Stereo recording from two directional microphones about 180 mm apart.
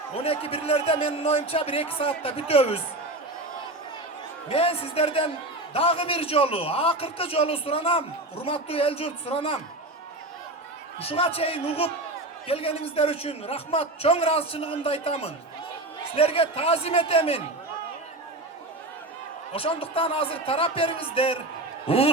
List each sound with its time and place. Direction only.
0.2 s a man's voice: 35° left (ahead or behind)
4.4 s a man's voice: 35° left (ahead or behind)
11.0 s a man's voice: 30° left (ahead or behind)
19.5 s a man's voice: 30° left (ahead or behind)